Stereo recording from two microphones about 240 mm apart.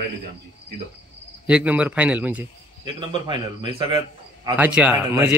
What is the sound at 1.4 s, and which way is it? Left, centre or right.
A man's voice, centre.